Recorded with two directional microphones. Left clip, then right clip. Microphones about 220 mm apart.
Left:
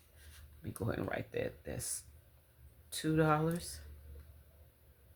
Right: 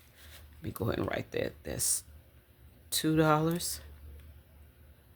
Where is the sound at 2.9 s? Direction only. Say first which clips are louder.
Right 5 dB; 45° right (ahead or behind).